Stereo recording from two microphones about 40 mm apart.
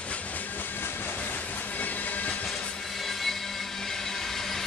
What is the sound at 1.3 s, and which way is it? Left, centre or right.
Train, left.